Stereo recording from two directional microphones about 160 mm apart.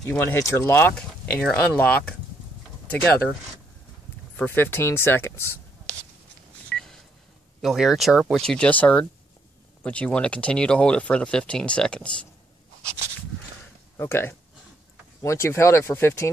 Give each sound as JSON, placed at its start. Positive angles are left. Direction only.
{"t": 0.1, "sound": "speech", "side_deg": 15}
{"t": 4.4, "sound": "speech", "side_deg": 15}
{"t": 6.7, "sound": "telephone dialing", "side_deg": 5}
{"t": 7.6, "sound": "speech", "side_deg": 0}
{"t": 13.9, "sound": "speech", "side_deg": 15}